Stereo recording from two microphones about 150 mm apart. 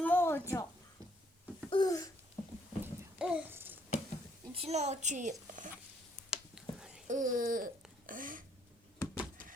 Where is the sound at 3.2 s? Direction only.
5° right (ahead or behind).